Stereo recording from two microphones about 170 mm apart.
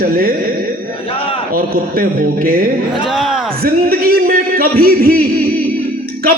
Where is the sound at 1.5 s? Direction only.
60° right (ahead or behind).